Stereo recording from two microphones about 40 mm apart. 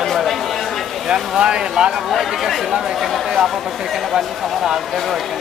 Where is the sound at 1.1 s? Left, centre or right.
Right.